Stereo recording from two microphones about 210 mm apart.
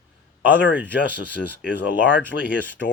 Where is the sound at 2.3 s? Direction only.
60° left (ahead or behind).